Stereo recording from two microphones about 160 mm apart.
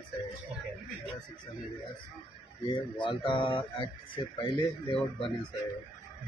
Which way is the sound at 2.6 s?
30° left (ahead or behind).